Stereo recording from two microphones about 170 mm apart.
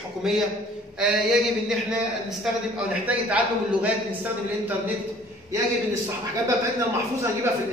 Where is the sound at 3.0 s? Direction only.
10° right (ahead or behind).